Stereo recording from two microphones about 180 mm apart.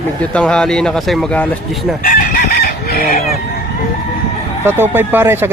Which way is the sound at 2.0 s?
55° left (ahead or behind).